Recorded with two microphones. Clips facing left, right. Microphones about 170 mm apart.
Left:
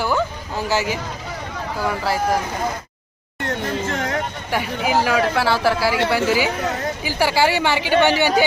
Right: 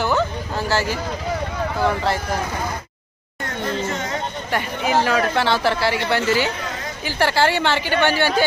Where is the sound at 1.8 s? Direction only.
5° left (ahead or behind).